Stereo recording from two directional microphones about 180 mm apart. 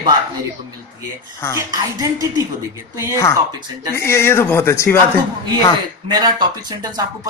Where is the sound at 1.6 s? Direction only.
20° right (ahead or behind).